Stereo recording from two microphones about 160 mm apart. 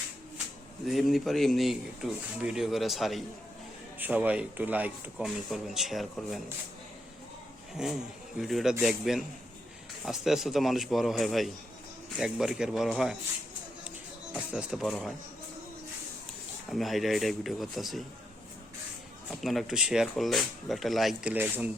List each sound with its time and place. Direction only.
0.9 s speech: centre (ahead or behind)
7.8 s speech: 5° right (ahead or behind)
14.3 s speech: 5° right (ahead or behind)
16.7 s speech: centre (ahead or behind)
19.3 s speech: centre (ahead or behind)
21.3 s speech: 10° right (ahead or behind)